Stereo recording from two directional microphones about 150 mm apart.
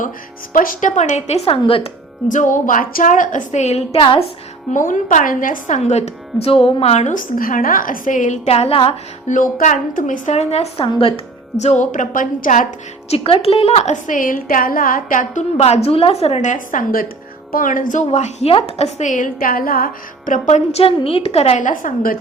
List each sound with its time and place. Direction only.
0.5 s speech: 65° left (ahead or behind)
1.5 s speech: 35° left (ahead or behind)
2.2 s speech: 60° left (ahead or behind); by 4.2 s 35° left (ahead or behind)
4.7 s speech: 60° left (ahead or behind); by 9.3 s 40° left (ahead or behind)
9.3 s a woman's voice: 60° left (ahead or behind); by 11.1 s 35° left (ahead or behind)
11.6 s speech: 50° left (ahead or behind)
13.1 s a woman's voice: 40° left (ahead or behind)
21.6 s speech: 60° left (ahead or behind)